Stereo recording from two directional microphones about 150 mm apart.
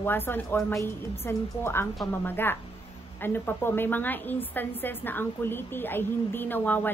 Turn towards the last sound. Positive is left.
turn(degrees=10)  # may be behind; listen again after turning